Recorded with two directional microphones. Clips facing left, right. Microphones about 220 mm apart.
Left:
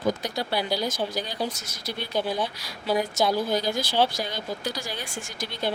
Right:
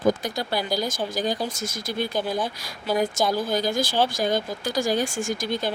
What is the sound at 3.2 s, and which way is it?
Speech, 50° right (ahead or behind).